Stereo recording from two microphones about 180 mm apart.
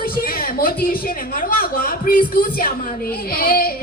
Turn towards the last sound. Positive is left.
turn(degrees=55)  # may be behind; listen again after turning